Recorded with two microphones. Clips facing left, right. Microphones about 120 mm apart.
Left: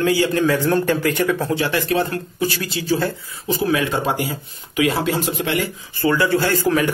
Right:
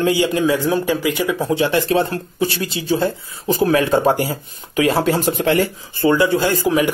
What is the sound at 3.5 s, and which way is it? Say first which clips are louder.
Speech: right 4 dB; 45° right (ahead or behind).